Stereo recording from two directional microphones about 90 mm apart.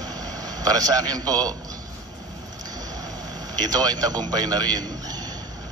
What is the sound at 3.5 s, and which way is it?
Speech, 45° right (ahead or behind).